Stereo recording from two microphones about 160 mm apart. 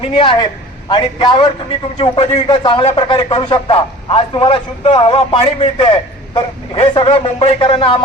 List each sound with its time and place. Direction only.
0.1 s a man's voice: 30° left (ahead or behind)